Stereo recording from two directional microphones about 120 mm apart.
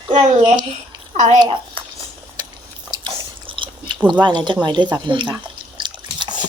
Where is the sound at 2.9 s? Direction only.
45° right (ahead or behind).